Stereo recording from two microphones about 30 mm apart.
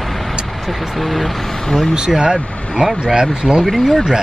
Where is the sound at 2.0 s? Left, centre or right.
Right.